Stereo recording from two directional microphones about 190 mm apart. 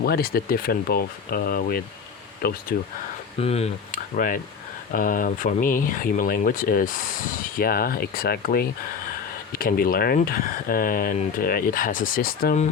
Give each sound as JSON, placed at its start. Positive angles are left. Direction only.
{"t": 0.0, "sound": "speech", "side_deg": 55}
{"t": 3.4, "sound": "speech", "side_deg": 35}